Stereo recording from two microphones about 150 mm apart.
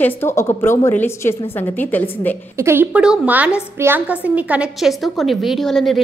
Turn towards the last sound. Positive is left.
turn(degrees=0)  # may be behind; listen again after turning